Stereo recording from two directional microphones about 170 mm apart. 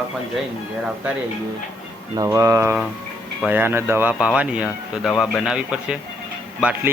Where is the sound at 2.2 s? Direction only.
20° right (ahead or behind).